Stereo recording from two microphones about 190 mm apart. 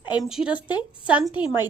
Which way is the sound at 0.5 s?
25° left (ahead or behind).